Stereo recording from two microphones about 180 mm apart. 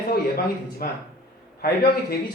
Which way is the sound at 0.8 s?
55° left (ahead or behind).